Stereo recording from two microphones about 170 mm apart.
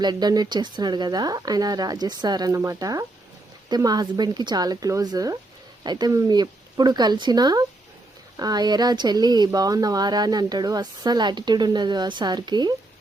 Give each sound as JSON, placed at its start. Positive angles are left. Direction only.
{"t": 0.0, "sound": "speech", "side_deg": -25}